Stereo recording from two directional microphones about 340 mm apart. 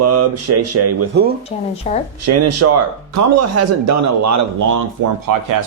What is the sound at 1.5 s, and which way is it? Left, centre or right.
Speech, centre.